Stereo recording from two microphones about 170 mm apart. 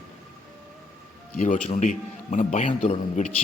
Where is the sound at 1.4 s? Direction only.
45° left (ahead or behind).